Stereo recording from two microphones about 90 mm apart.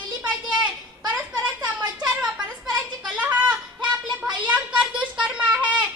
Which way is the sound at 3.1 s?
15° right (ahead or behind).